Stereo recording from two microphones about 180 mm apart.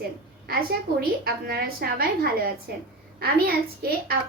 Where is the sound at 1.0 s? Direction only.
60° right (ahead or behind).